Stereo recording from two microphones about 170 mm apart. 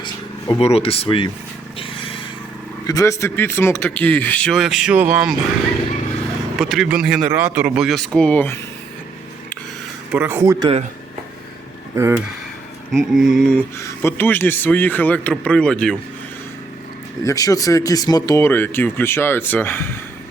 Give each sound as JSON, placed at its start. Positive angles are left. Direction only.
{"t": 0.0, "sound": "speech", "side_deg": 35}
{"t": 1.8, "sound": "a sound", "side_deg": 30}
{"t": 2.8, "sound": "speech", "side_deg": 20}
{"t": 6.6, "sound": "speech", "side_deg": 0}
{"t": 7.9, "sound": "speech", "side_deg": 0}
{"t": 10.1, "sound": "speech", "side_deg": -10}
{"t": 11.9, "sound": "speech", "side_deg": -15}
{"t": 12.9, "sound": "speech", "side_deg": 0}
{"t": 13.7, "sound": "speech", "side_deg": 15}
{"t": 17.2, "sound": "speech", "side_deg": 20}